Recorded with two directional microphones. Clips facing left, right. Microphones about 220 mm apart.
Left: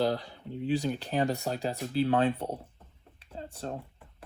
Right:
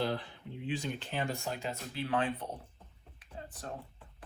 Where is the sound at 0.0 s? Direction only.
35° left (ahead or behind).